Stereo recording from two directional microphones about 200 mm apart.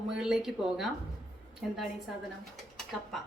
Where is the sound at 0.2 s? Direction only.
Centre (ahead or behind).